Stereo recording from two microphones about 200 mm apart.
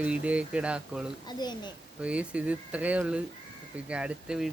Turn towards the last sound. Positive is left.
turn(degrees=-5)  # may be behind; listen again after turning